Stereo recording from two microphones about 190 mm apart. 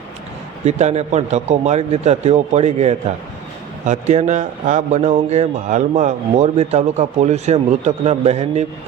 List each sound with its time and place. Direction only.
0.6 s a man's voice: 35° right (ahead or behind)